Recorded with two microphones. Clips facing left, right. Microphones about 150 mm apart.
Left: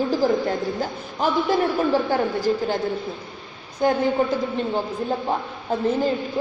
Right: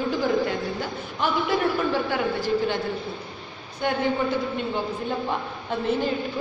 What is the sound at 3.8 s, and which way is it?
Speech, 40° left (ahead or behind).